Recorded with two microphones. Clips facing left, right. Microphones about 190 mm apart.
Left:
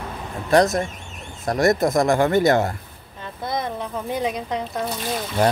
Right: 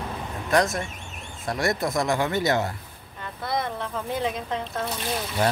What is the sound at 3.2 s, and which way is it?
Speech, 20° left (ahead or behind).